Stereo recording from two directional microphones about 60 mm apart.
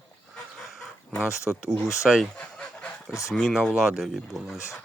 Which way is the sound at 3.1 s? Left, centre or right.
Left.